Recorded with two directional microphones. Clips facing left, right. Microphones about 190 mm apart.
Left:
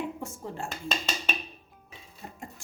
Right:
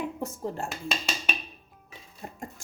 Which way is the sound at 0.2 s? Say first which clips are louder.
Right 4 dB; 40° right (ahead or behind).